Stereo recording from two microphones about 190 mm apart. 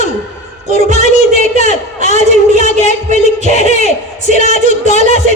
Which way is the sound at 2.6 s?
35° left (ahead or behind).